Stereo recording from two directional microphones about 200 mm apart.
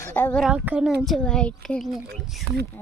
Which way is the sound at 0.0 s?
10° left (ahead or behind).